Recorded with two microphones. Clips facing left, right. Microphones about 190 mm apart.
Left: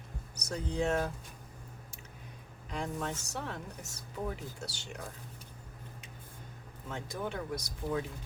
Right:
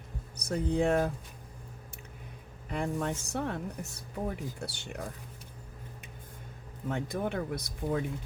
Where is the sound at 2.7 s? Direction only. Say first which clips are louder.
Right 4 dB; 55° right (ahead or behind).